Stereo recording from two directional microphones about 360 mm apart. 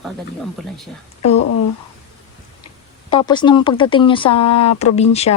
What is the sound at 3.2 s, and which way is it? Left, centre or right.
Speech, centre.